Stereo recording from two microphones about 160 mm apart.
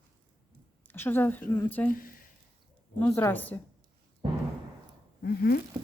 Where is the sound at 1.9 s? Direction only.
60° left (ahead or behind).